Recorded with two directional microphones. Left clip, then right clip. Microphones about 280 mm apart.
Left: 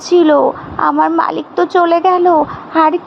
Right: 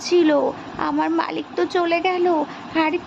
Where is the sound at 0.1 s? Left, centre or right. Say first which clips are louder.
Left 8 dB; centre.